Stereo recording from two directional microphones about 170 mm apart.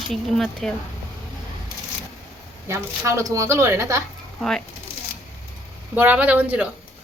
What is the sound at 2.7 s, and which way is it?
A woman's voice, 15° right (ahead or behind).